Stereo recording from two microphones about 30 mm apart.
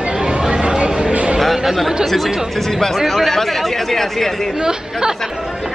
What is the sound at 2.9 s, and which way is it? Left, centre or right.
Speech, centre.